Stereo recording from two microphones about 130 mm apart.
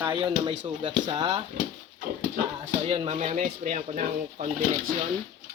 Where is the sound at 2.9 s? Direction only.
50° right (ahead or behind); by 4.9 s 80° right.